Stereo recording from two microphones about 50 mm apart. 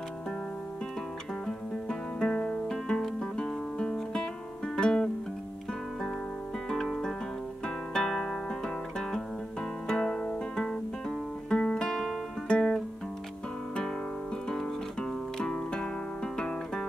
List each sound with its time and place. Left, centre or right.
1.9 s music: centre
6.7 s music: centre
12.4 s guitar: centre
14.5 s music: centre